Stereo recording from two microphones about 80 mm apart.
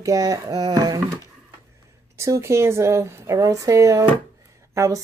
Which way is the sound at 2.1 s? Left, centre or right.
Right.